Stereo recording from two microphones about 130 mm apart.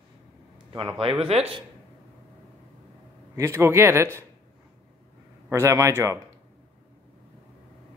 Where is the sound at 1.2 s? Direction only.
45° right (ahead or behind).